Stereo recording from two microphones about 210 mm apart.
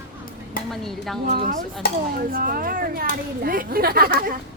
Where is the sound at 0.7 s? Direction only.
Centre (ahead or behind).